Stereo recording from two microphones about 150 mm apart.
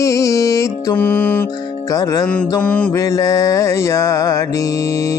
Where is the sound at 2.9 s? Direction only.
20° left (ahead or behind).